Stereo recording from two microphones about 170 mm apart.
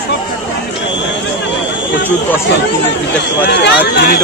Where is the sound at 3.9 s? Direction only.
75° left (ahead or behind).